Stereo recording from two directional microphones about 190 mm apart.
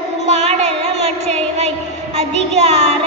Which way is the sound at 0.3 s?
35° right (ahead or behind).